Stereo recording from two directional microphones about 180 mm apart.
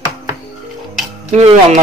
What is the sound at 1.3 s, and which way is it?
Speech, 40° right (ahead or behind).